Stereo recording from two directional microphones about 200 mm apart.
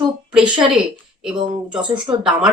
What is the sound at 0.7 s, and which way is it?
A woman's voice, 5° right (ahead or behind).